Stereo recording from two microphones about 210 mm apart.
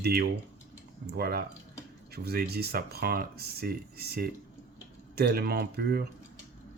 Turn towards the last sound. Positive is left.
turn(degrees=-50)  # may be behind; listen again after turning